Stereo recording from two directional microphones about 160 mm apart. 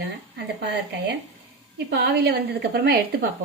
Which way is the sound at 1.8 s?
90° right.